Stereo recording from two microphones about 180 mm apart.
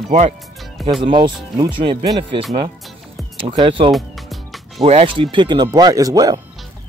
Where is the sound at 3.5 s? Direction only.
30° right (ahead or behind).